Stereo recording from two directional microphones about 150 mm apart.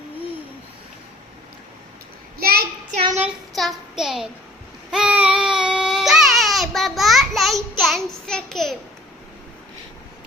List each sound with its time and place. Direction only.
2.4 s child singing: 90° right
3.5 s a sound: centre (ahead or behind)
4.9 s baby cry: 5° right (ahead or behind)